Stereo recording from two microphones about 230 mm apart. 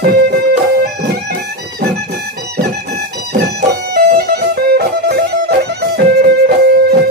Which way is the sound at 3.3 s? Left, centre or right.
Right.